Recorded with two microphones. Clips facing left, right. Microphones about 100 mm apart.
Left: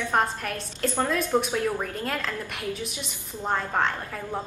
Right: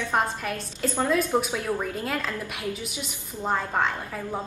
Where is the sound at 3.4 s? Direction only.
5° right (ahead or behind).